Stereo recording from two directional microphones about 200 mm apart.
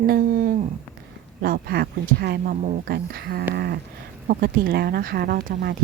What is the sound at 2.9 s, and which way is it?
A woman's voice, 50° right (ahead or behind).